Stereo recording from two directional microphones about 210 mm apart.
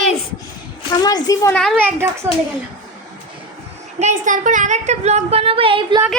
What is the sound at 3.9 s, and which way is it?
A woman's voice, 35° right (ahead or behind).